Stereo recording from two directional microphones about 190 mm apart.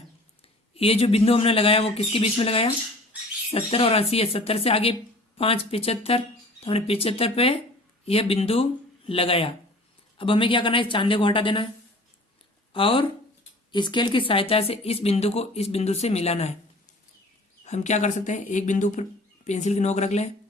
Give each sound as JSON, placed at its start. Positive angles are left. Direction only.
{"t": 0.7, "sound": "speech", "side_deg": 30}
{"t": 12.7, "sound": "speech", "side_deg": 30}
{"t": 17.7, "sound": "speech", "side_deg": 40}